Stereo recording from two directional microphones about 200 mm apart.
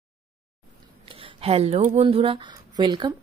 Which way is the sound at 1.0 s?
30° right (ahead or behind).